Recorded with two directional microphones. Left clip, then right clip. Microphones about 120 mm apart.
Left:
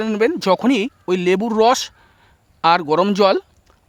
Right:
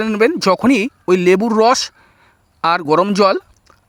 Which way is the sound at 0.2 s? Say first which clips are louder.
Right 3 dB; 30° right (ahead or behind).